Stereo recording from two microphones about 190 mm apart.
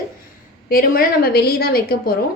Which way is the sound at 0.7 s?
50° left (ahead or behind).